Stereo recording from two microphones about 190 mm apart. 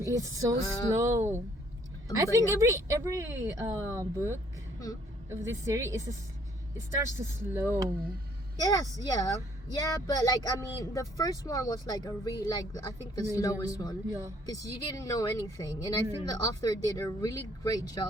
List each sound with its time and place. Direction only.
0.0 s a woman's voice: 15° right (ahead or behind)
8.5 s speech: 20° left (ahead or behind)
14.1 s a woman's voice: 15° right (ahead or behind)
14.4 s speech: 15° left (ahead or behind)